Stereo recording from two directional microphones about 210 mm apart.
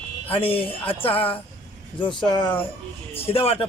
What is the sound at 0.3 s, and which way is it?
Speech, 25° left (ahead or behind).